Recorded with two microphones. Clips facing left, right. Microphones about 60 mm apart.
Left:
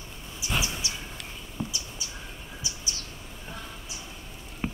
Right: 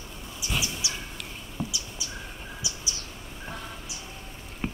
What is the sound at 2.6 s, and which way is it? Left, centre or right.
Bird, left.